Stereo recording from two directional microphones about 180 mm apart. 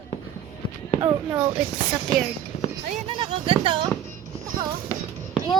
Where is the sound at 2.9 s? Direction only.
35° right (ahead or behind).